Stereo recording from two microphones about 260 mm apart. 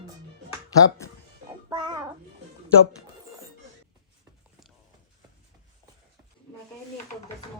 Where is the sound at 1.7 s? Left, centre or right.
Centre.